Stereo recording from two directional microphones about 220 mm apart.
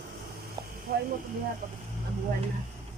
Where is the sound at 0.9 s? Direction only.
45° right (ahead or behind).